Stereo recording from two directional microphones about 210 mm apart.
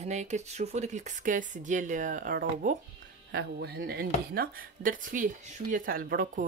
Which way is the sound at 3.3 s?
50° right (ahead or behind).